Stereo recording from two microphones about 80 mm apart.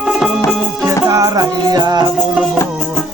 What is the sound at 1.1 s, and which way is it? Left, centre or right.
Music, right.